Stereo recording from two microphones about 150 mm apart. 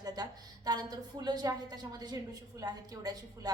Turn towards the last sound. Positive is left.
turn(degrees=-25)  # may be behind; listen again after turning